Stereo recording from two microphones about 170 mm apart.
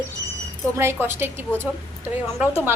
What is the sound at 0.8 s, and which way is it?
Speech, 15° right (ahead or behind).